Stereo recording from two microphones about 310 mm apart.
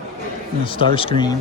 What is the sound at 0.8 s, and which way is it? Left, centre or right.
Speech, centre.